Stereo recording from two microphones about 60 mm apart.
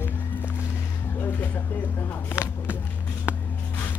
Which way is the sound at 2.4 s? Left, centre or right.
Centre.